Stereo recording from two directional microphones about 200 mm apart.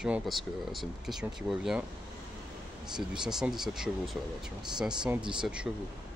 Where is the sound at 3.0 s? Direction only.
Centre (ahead or behind).